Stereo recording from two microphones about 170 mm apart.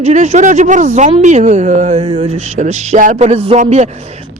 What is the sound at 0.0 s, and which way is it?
Speech, 45° right (ahead or behind).